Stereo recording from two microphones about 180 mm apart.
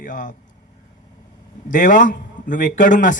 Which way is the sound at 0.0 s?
45° left (ahead or behind).